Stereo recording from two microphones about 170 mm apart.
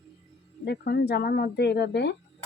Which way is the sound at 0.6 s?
80° left.